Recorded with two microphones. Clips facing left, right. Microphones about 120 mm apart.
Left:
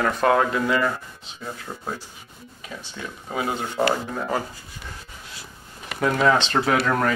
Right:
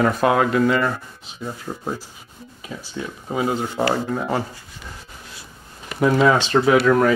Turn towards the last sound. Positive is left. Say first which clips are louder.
# right 6 dB
turn(degrees=-5)  # may be behind; listen again after turning